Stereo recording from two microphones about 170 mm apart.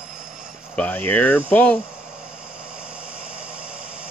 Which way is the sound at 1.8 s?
5° right (ahead or behind).